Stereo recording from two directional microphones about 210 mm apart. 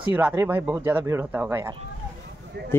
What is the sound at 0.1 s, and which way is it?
Speech, 10° right (ahead or behind).